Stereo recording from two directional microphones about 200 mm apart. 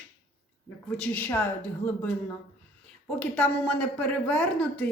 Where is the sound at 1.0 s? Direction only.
10° left (ahead or behind).